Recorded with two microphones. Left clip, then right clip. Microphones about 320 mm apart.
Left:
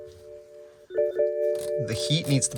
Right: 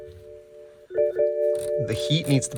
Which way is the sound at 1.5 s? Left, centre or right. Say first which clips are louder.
Right 3 dB; left.